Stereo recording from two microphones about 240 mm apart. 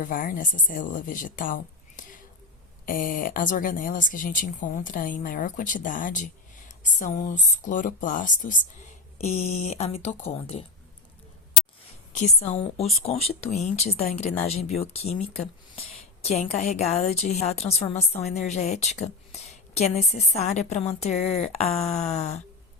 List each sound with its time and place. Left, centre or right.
0.0 s a woman's voice: left
12.1 s a woman's voice: left